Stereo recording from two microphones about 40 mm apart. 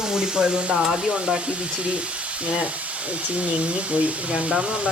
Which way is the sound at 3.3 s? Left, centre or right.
Right.